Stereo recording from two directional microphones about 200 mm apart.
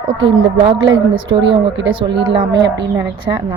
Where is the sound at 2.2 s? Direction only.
25° right (ahead or behind).